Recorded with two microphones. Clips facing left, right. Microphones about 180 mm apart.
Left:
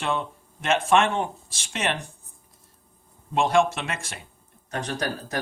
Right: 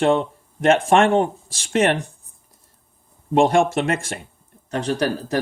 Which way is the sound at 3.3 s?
50° right (ahead or behind).